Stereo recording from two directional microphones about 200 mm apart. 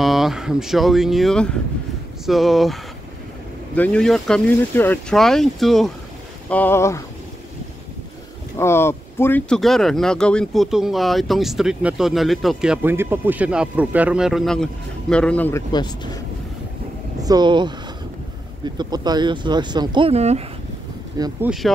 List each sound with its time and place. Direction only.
0.0 s speech: centre (ahead or behind)
8.5 s speech: 10° left (ahead or behind)
17.2 s speech: 20° right (ahead or behind)
18.8 s speech: 20° right (ahead or behind)
21.2 s speech: 20° right (ahead or behind)
21.5 s speech: centre (ahead or behind)